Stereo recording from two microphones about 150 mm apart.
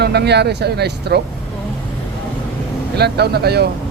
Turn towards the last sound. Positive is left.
turn(degrees=-90)